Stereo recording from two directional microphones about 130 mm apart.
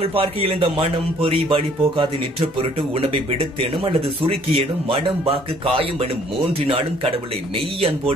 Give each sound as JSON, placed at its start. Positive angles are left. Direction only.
{"t": 0.0, "sound": "speech", "side_deg": -45}
{"t": 3.8, "sound": "speech", "side_deg": -45}